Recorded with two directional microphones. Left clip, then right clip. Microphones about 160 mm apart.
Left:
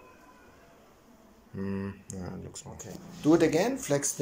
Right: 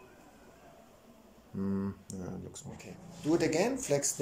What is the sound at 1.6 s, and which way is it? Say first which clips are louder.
Speech: left 1 dB; 15° right (ahead or behind).